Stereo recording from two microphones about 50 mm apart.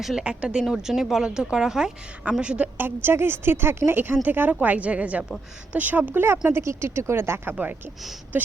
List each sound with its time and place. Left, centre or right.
0.2 s speech: centre
2.4 s a woman's voice: right
2.7 s a woman's voice: right
6.5 s speech: right